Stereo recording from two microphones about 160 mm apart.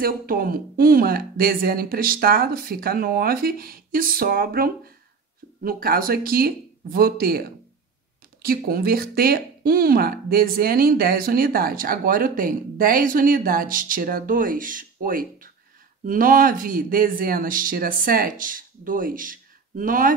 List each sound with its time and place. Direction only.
0.0 s speech: 65° right (ahead or behind)